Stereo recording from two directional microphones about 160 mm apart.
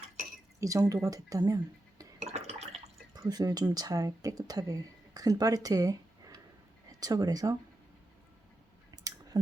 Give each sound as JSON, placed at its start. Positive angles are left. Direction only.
{"t": 0.6, "sound": "speech", "side_deg": -20}
{"t": 2.1, "sound": "liquid", "side_deg": -40}
{"t": 3.2, "sound": "speech", "side_deg": -25}
{"t": 9.3, "sound": "speech", "side_deg": -25}